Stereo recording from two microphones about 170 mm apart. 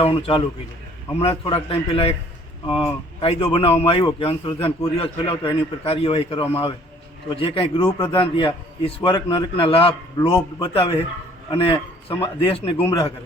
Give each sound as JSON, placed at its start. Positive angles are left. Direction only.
{"t": 0.0, "sound": "a man's voice", "side_deg": 35}